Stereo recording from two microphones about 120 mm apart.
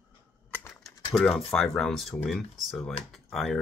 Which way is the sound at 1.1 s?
Centre (ahead or behind).